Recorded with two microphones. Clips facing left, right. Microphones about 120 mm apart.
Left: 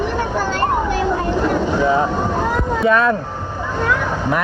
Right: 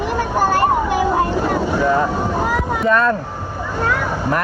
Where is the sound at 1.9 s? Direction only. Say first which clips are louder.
Even; 15° left (ahead or behind).